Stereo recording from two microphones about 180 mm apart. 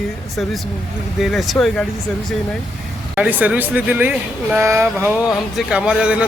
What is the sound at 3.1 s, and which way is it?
Speech, 10° right (ahead or behind).